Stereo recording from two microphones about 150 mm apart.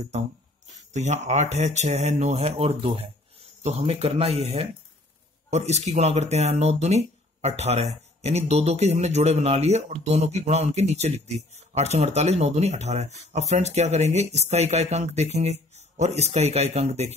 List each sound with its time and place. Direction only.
0.9 s speech: 50° right (ahead or behind)